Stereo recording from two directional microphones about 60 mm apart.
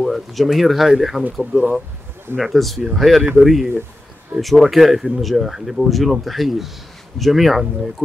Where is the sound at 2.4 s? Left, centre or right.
Centre.